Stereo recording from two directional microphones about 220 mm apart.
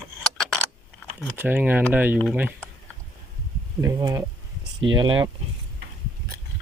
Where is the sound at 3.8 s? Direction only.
15° right (ahead or behind).